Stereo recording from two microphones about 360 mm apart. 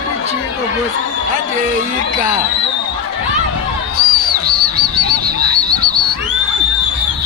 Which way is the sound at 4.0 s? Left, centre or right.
Right.